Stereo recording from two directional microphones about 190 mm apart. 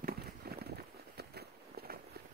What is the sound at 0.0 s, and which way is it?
Walk, 55° right (ahead or behind).